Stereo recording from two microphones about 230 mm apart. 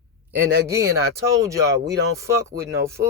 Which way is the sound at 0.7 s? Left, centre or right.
Centre.